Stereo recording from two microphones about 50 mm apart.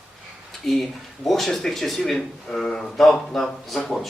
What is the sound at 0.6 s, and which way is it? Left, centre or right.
Speech, centre.